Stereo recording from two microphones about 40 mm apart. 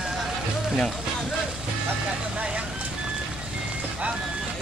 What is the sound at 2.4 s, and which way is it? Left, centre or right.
Vehicle, right.